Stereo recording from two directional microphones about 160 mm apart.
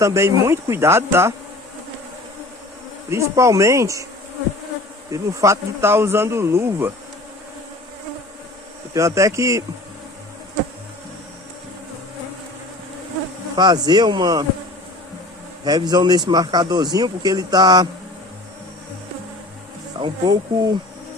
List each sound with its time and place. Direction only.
0.0 s speech: 20° right (ahead or behind)
3.1 s speech: 20° right (ahead or behind)
5.1 s speech: 20° right (ahead or behind)
8.9 s speech: 20° right (ahead or behind)
13.6 s speech: 25° right (ahead or behind)
15.6 s speech: 25° right (ahead or behind)
20.0 s speech: 25° right (ahead or behind)